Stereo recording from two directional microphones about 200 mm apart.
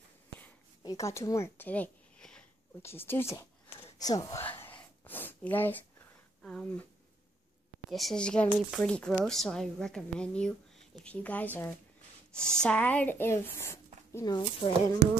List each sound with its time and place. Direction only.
0.8 s speech: 15° left (ahead or behind)
3.8 s a sound: 20° left (ahead or behind)
6.4 s a woman's voice: 5° left (ahead or behind)
7.9 s a woman's voice: centre (ahead or behind); by 15.0 s 20° left (ahead or behind)